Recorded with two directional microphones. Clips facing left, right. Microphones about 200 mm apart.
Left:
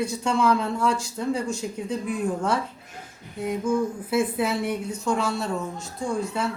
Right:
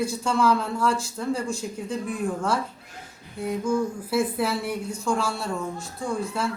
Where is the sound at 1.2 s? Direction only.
Centre (ahead or behind).